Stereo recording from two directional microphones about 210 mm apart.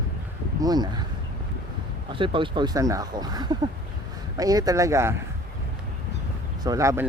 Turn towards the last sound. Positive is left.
turn(degrees=-15)  # may be behind; listen again after turning